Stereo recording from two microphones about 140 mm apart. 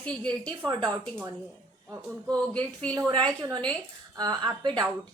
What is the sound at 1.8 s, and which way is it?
A woman's voice, 25° right (ahead or behind).